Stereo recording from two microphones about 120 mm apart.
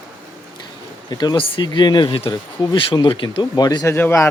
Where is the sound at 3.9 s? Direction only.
20° left (ahead or behind).